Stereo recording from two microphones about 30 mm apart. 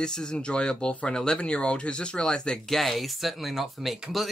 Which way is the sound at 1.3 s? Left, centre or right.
Left.